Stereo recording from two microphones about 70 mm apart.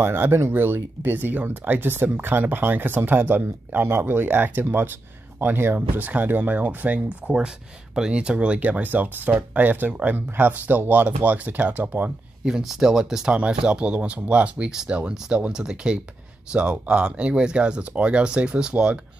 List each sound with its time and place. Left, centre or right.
0.0 s speech: right
12.4 s speech: centre